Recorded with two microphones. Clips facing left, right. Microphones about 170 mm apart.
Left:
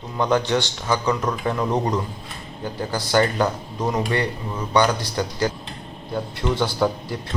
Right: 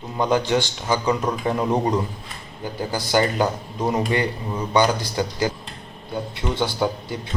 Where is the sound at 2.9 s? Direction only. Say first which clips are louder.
Left 1 dB; 15° right (ahead or behind).